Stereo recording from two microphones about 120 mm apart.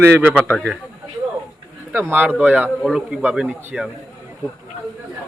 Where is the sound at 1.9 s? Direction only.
15° right (ahead or behind).